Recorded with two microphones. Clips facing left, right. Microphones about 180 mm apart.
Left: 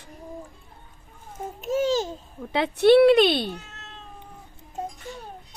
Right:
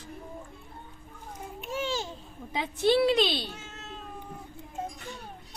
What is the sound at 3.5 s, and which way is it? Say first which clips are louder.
Cat: left 5 dB; centre (ahead or behind).